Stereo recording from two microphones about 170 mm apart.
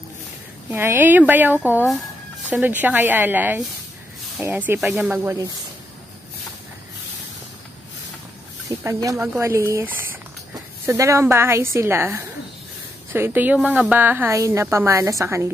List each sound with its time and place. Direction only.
0.7 s a woman's voice: 15° right (ahead or behind)
8.6 s a woman's voice: 20° right (ahead or behind)
10.9 s a woman's voice: 15° right (ahead or behind)